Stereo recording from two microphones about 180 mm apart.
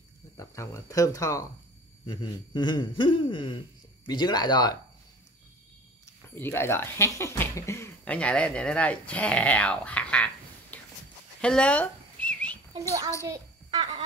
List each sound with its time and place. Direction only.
0.4 s speech: 15° left (ahead or behind)
6.3 s speech: 10° left (ahead or behind)
11.4 s whistling: 5° left (ahead or behind)
13.2 s a sound: 20° right (ahead or behind)